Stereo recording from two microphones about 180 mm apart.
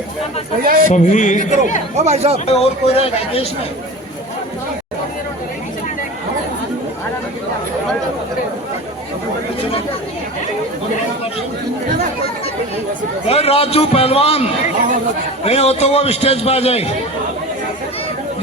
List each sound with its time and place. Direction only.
0.6 s a man's voice: 55° right (ahead or behind)
0.9 s speech: 45° left (ahead or behind)
2.0 s speech: 35° right (ahead or behind)
2.5 s a man's voice: 35° left (ahead or behind)
13.2 s a man's voice: 35° left (ahead or behind)